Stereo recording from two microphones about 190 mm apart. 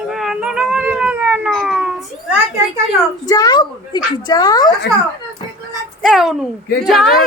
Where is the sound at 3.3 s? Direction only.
20° left (ahead or behind).